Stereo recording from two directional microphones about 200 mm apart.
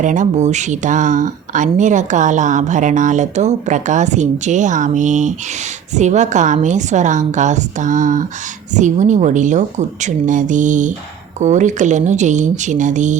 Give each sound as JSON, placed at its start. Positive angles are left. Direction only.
{"t": 0.0, "sound": "speech", "side_deg": -40}